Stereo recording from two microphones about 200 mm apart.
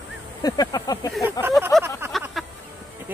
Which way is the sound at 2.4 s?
Centre (ahead or behind).